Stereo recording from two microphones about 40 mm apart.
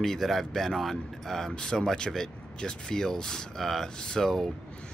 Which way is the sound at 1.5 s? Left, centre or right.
Centre.